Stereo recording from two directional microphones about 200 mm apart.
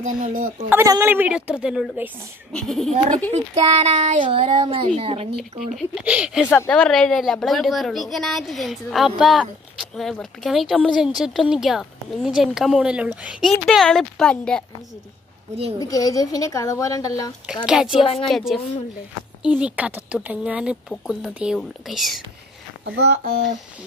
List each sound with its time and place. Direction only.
0.0 s speech: 40° right (ahead or behind)
0.7 s a woman's voice: 15° right (ahead or behind)
3.3 s a child's voice: 30° right (ahead or behind)
5.3 s a woman's voice: centre (ahead or behind)
6.4 s a woman's voice: 10° left (ahead or behind)
15.8 s a woman's voice: 15° left (ahead or behind)
17.6 s a woman's voice: 5° right (ahead or behind)
19.6 s a woman's voice: 5° right (ahead or behind)
22.8 s speech: 55° right (ahead or behind)